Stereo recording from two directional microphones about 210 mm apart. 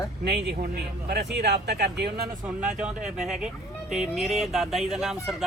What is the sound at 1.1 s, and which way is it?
Speech, 50° right (ahead or behind).